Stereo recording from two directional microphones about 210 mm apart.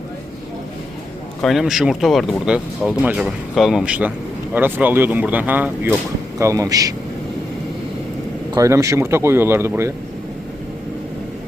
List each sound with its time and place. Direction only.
1.4 s speech: centre (ahead or behind); by 6.9 s 15° right (ahead or behind)
8.5 s speech: 15° right (ahead or behind)